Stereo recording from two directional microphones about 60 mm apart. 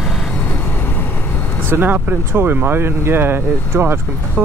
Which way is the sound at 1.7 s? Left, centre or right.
Right.